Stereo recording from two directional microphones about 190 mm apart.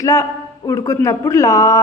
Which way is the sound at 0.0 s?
15° left (ahead or behind).